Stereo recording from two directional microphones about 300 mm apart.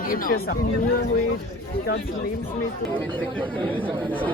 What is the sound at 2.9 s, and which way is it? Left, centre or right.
Speech, centre.